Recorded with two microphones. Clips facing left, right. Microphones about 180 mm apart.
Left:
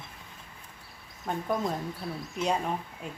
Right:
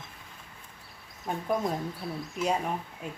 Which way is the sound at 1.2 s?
Centre (ahead or behind).